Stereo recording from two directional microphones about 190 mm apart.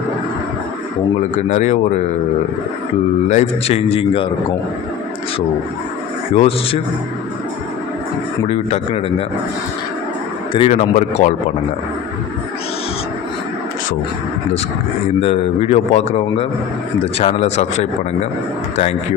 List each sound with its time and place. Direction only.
1.4 s a man's voice: 40° left (ahead or behind)
3.2 s a man's voice: 35° left (ahead or behind)
6.3 s a man's voice: 30° left (ahead or behind)
8.4 s a man's voice: 30° left (ahead or behind)
10.7 s a man's voice: 40° left (ahead or behind)
15.2 s a man's voice: 35° left (ahead or behind)